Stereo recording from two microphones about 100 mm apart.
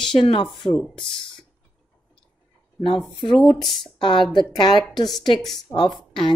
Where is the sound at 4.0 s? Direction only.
50° left (ahead or behind).